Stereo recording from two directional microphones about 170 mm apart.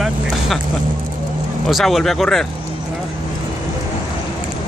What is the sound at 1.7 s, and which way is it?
Speech, centre (ahead or behind).